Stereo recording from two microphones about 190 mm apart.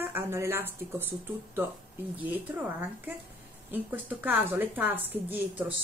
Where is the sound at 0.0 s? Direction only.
10° right (ahead or behind).